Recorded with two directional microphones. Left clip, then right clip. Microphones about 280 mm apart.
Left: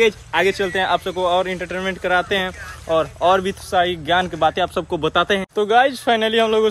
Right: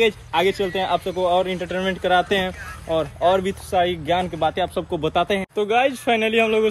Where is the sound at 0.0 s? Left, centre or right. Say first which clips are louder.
Left 2 dB; centre.